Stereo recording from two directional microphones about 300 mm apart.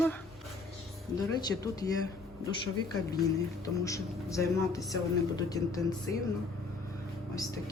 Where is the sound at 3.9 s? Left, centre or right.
Centre.